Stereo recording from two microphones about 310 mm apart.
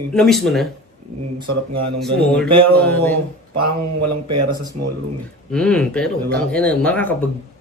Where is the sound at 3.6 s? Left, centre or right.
Right.